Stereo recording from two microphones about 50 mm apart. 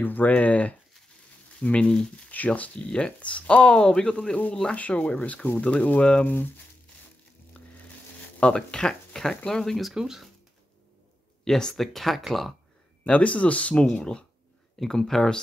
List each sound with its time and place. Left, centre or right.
0.0 s speech: left
0.3 s speech: left
2.3 s speech: left; by 4.4 s centre
4.6 s speech: left
6.2 s speech: left
8.4 s speech: centre
9.9 s speech: centre
11.4 s speech: centre
13.0 s speech: left